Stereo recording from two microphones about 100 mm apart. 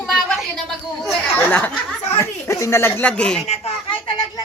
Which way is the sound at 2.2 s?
30° left (ahead or behind).